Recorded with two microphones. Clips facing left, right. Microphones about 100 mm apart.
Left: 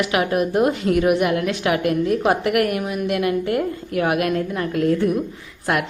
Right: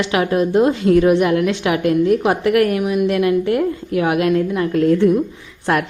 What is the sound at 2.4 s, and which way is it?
Speech, 25° left (ahead or behind).